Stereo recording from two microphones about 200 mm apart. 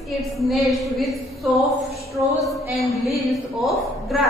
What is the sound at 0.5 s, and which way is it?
Speech, centre (ahead or behind).